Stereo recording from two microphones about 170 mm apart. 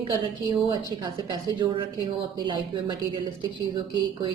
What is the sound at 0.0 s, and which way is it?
A woman's voice, 25° right (ahead or behind).